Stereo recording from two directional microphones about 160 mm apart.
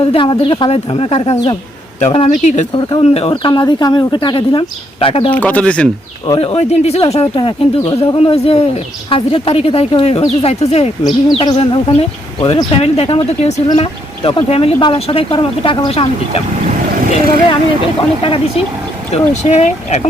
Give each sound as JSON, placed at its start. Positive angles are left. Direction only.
{"t": 0.0, "sound": "speech", "side_deg": 30}
{"t": 2.7, "sound": "speech", "side_deg": 35}
{"t": 5.3, "sound": "speech", "side_deg": 10}
{"t": 6.4, "sound": "speech", "side_deg": 40}
{"t": 11.0, "sound": "speech", "side_deg": 25}
{"t": 18.2, "sound": "speech", "side_deg": 35}